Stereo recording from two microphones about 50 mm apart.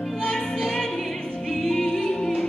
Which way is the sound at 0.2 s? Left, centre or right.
Centre.